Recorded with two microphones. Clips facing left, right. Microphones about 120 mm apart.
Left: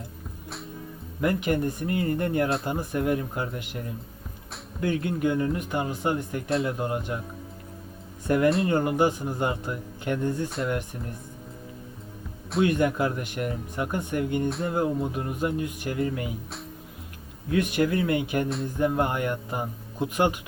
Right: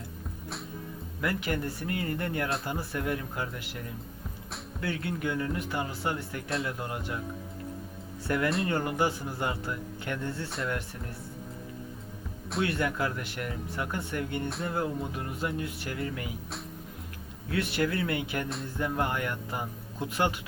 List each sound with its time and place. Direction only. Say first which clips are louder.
1.2 s speech: left 6 dB; 20° left (ahead or behind)
8.3 s speech: left 6 dB; 20° left (ahead or behind)
12.6 s speech: left 7 dB; 20° left (ahead or behind)
17.5 s speech: left 5 dB; 15° left (ahead or behind)